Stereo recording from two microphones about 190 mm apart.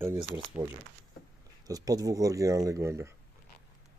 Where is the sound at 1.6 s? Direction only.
20° right (ahead or behind).